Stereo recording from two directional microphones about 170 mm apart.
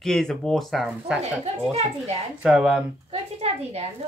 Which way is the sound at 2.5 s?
5° right (ahead or behind).